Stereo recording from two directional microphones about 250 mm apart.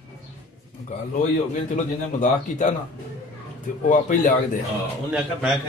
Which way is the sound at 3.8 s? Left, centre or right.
Left.